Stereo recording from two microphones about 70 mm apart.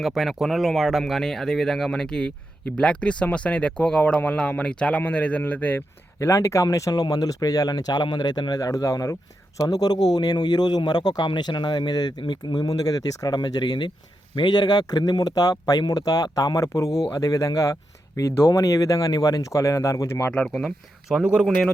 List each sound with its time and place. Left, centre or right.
0.0 s speech: centre; by 5.8 s left
6.1 s speech: left
6.9 s speech: left
8.7 s speech: left
9.6 s speech: left
20.3 s speech: centre
21.2 s speech: centre